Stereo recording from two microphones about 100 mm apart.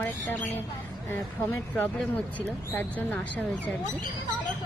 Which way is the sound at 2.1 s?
15° left (ahead or behind).